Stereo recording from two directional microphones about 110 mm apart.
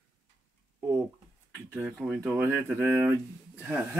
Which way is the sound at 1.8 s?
10° right (ahead or behind).